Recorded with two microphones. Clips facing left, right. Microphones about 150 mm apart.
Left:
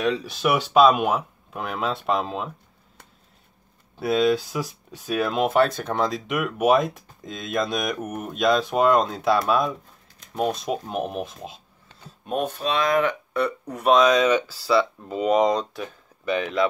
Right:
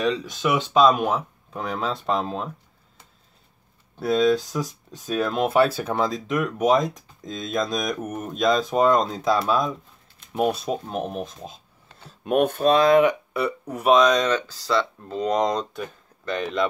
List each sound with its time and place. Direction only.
0.0 s speech: 5° left (ahead or behind)
4.0 s speech: 5° left (ahead or behind)
12.3 s speech: 65° right (ahead or behind)
12.7 s speech: 30° right (ahead or behind)
13.0 s speech: 5° right (ahead or behind)